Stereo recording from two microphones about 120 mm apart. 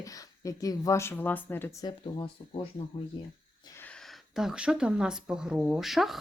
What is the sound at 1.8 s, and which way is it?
Speech, 45° left (ahead or behind).